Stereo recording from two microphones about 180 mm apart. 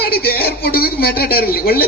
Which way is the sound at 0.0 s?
60° left (ahead or behind).